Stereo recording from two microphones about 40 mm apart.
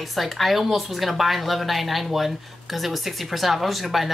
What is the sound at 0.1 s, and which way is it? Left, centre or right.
Speech, centre.